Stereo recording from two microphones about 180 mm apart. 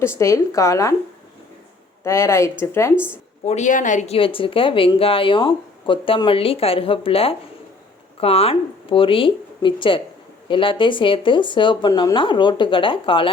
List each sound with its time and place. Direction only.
0.0 s speech: 15° left (ahead or behind)
2.0 s speech: 15° left (ahead or behind)
3.4 s speech: 40° left (ahead or behind)